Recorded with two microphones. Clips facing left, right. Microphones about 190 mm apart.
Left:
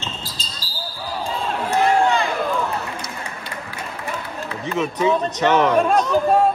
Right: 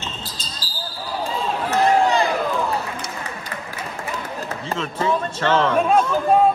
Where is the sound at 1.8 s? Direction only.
35° right (ahead or behind).